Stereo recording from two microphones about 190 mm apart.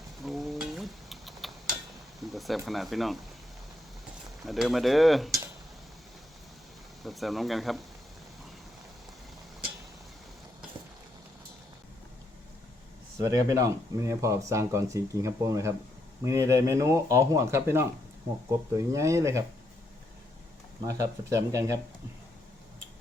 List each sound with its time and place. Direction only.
0.2 s a sound: centre (ahead or behind)
2.3 s speech: centre (ahead or behind)
4.4 s speech: centre (ahead or behind)
7.0 s speech: centre (ahead or behind)
13.1 s speech: 15° right (ahead or behind)
20.8 s speech: 15° right (ahead or behind)